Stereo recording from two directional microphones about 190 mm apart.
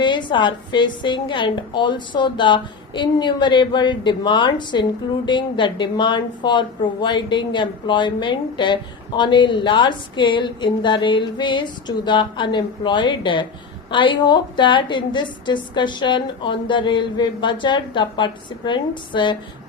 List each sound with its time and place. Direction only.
0.0 s a woman's voice: 25° left (ahead or behind)